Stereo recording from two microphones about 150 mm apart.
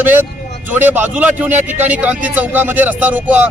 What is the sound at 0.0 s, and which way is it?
A man's voice, 15° right (ahead or behind).